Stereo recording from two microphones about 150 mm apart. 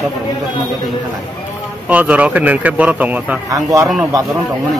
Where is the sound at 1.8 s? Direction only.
10° right (ahead or behind).